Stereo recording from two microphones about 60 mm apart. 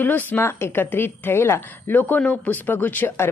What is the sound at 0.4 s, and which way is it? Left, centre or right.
Speech, left.